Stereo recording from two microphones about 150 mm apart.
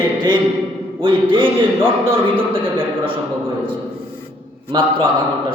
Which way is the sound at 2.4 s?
35° right (ahead or behind).